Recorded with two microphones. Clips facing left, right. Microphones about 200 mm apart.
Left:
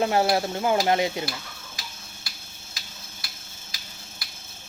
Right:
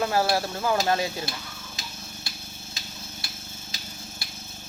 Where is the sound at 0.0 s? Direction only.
20° left (ahead or behind).